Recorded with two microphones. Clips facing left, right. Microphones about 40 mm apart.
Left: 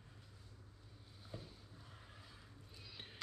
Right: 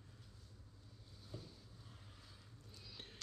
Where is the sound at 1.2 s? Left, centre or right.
Left.